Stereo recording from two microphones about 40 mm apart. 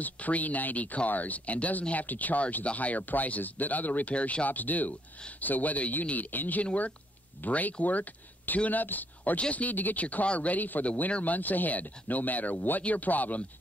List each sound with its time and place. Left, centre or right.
0.0 s speech: left
4.1 s speech: left
4.5 s speech: left
6.6 s speech: left
7.4 s speech: left
9.4 s speech: left
10.2 s speech: left